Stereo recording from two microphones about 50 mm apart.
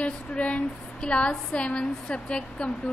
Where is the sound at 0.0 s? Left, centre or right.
Left.